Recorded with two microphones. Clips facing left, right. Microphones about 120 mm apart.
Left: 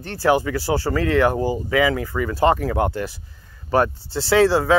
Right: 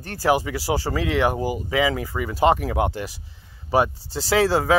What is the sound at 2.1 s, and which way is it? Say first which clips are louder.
Speech: even; 15° right (ahead or behind).